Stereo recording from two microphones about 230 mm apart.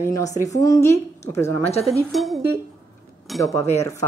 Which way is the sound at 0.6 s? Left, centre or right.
Centre.